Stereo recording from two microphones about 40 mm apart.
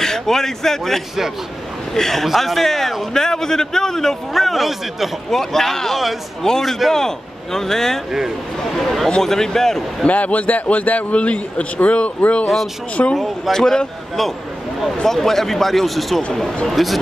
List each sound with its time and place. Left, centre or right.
0.0 s a man's voice: centre
5.4 s a man's voice: centre
9.2 s a man's voice: centre
10.0 s a man's voice: left
13.0 s speech: left
13.5 s a man's voice: centre